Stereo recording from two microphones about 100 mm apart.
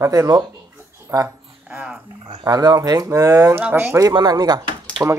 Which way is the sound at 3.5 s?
20° right (ahead or behind).